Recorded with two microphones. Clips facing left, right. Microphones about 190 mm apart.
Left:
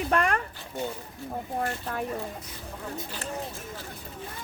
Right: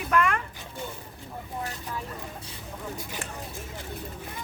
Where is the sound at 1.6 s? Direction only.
55° left (ahead or behind).